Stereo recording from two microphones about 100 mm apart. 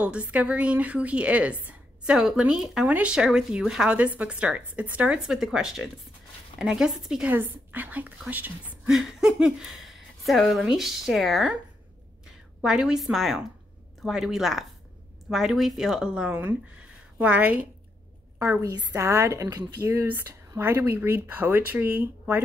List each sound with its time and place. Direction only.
0.0 s a woman's voice: 15° right (ahead or behind)
7.2 s speech: 15° right (ahead or behind)
8.8 s a woman's voice: 5° right (ahead or behind)
12.6 s a woman's voice: 5° right (ahead or behind); by 18.7 s 25° right (ahead or behind)
18.7 s a woman's voice: 40° right (ahead or behind)
18.9 s speech: 30° right (ahead or behind)